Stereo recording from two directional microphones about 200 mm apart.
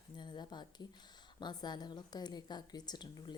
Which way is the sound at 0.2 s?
20° left (ahead or behind).